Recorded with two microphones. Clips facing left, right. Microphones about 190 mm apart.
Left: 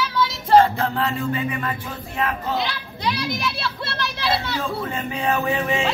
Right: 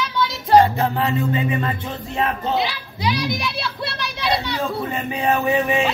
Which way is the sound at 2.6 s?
Centre (ahead or behind).